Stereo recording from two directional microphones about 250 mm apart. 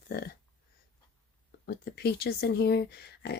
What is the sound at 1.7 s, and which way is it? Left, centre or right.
Speech, left.